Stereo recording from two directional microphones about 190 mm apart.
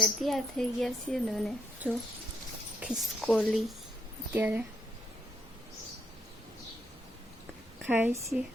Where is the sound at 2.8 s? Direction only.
Centre (ahead or behind).